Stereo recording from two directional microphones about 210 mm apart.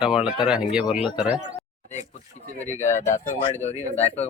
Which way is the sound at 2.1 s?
35° left (ahead or behind).